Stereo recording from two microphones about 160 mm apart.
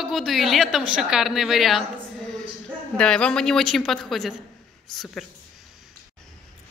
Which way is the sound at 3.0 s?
5° left (ahead or behind).